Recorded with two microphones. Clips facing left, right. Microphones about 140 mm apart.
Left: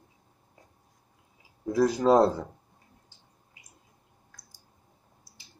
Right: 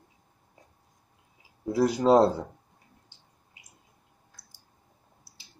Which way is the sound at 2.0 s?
25° right (ahead or behind).